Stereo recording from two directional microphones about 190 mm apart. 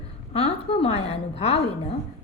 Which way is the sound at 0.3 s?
30° left (ahead or behind).